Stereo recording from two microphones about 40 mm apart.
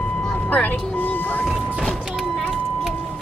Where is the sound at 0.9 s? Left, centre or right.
Left.